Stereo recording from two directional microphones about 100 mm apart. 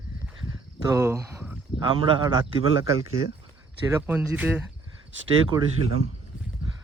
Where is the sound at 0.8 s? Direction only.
30° right (ahead or behind).